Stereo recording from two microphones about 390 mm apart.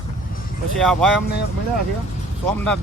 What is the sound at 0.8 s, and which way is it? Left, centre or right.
Speech, centre.